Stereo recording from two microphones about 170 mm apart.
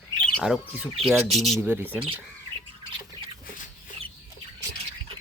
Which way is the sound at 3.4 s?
50° left (ahead or behind).